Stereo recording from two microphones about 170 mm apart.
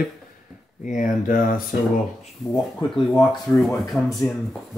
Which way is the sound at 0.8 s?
50° left (ahead or behind).